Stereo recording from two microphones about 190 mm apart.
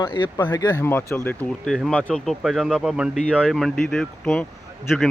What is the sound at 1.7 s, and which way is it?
Speech, centre (ahead or behind).